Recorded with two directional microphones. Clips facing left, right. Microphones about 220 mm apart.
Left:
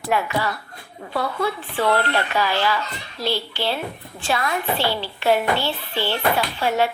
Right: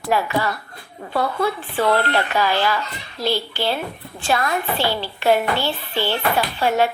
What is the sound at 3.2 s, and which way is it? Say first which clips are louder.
A child's voice: right 2 dB; 45° right (ahead or behind).